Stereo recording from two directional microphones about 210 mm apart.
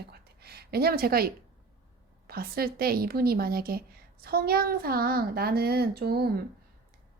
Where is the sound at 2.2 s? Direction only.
45° right (ahead or behind).